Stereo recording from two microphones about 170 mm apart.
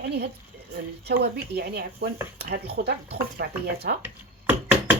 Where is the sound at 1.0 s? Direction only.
75° right (ahead or behind).